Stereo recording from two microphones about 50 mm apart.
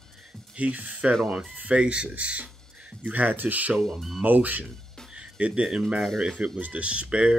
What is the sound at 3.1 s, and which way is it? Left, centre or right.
Speech, right.